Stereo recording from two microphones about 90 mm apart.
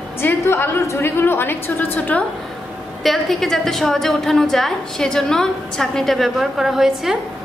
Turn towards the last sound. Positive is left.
turn(degrees=-5)  # may be behind; listen again after turning